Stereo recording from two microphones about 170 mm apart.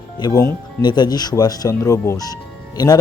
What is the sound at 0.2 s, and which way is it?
Speech, 20° left (ahead or behind).